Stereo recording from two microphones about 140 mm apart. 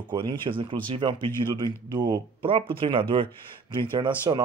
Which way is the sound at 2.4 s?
40° right (ahead or behind).